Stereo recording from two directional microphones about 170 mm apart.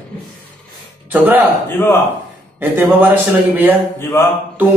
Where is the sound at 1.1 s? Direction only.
10° right (ahead or behind).